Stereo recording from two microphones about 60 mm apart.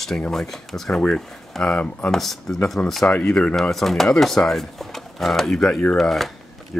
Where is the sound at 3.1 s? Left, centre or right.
Centre.